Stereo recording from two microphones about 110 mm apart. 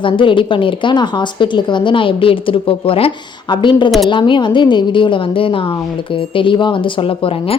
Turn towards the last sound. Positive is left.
turn(degrees=60)  # may be behind; listen again after turning